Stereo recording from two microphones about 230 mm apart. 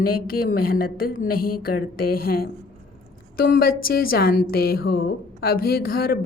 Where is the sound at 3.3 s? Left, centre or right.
Left.